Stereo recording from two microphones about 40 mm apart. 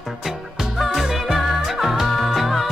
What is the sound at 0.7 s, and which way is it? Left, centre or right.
Music, centre.